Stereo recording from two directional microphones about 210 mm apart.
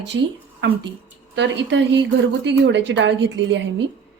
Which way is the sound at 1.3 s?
55° right (ahead or behind).